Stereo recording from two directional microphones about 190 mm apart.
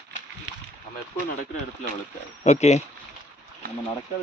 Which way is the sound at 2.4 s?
35° left (ahead or behind).